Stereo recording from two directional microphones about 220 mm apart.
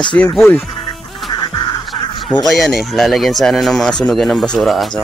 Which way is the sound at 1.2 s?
20° left (ahead or behind).